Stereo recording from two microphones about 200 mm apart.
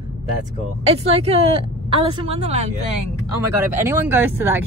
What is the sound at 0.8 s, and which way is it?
Speech, 30° right (ahead or behind).